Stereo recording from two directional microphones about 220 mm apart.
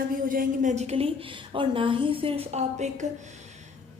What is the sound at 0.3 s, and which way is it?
A woman's voice, 35° right (ahead or behind).